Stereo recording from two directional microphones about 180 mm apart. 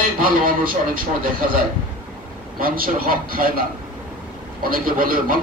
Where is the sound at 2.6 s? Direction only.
50° right (ahead or behind).